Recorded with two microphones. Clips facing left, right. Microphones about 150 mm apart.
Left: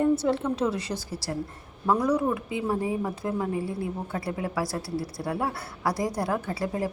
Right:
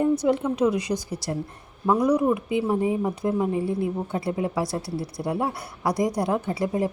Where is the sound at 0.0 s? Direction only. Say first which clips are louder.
Right 2 dB; 15° right (ahead or behind).